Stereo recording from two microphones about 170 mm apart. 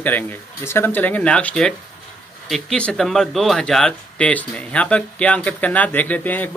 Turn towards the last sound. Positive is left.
turn(degrees=10)  # may be behind; listen again after turning